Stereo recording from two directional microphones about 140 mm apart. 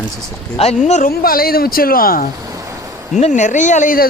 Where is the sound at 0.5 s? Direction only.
45° left (ahead or behind); by 2.2 s 90° left.